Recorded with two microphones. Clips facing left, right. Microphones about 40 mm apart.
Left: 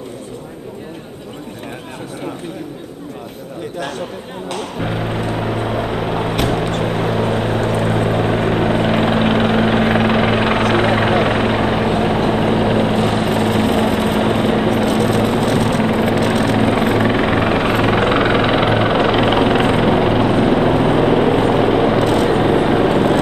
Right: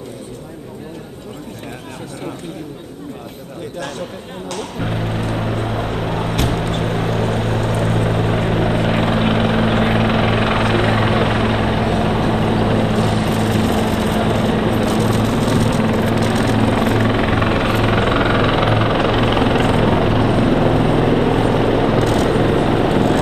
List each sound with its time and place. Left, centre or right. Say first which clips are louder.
4.6 s vehicle: left 1 dB; centre
9.7 s vehicle: left 2 dB; centre
9.9 s helicopter: left 2 dB; centre
12.3 s vehicle: left 2 dB; centre
13.0 s vehicle: left 2 dB; left
13.3 s vehicle: left 2 dB; centre
18.1 s vehicle: left 1 dB; left